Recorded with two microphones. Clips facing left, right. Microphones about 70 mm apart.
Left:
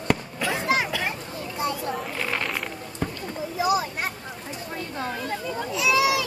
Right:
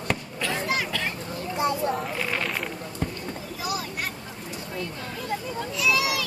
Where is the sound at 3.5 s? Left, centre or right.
Left.